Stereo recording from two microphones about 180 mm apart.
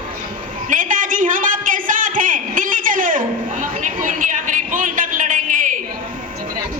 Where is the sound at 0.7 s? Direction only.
45° right (ahead or behind).